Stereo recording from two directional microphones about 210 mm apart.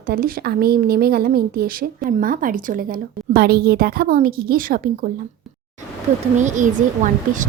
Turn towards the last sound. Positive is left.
turn(degrees=-35)  # may be behind; listen again after turning